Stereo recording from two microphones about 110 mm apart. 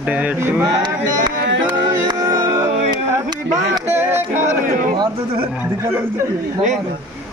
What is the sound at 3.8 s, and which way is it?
Music, 20° right (ahead or behind).